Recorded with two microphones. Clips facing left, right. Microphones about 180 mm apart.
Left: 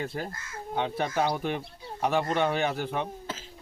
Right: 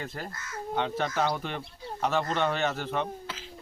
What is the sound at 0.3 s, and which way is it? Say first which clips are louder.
Speech: even; 25° left (ahead or behind).